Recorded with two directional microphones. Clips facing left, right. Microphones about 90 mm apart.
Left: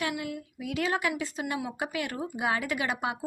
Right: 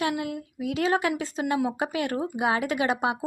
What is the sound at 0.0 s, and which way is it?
A woman's voice, 35° right (ahead or behind).